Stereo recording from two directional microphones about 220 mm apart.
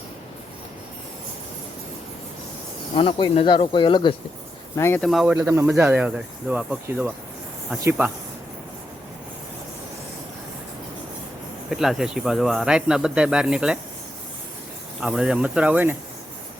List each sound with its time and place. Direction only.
2.9 s speech: 25° left (ahead or behind)
4.8 s speech: 5° left (ahead or behind); by 8.1 s 10° right (ahead or behind)
11.7 s speech: centre (ahead or behind)
15.0 s speech: centre (ahead or behind)